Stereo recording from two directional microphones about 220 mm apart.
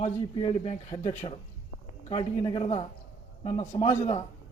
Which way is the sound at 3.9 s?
25° left (ahead or behind).